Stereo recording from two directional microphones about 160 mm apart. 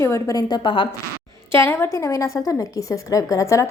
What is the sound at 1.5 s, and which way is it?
A woman's voice, 15° left (ahead or behind).